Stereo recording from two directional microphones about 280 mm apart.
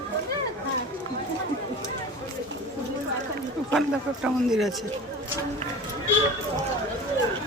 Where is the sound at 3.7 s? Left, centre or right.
Centre.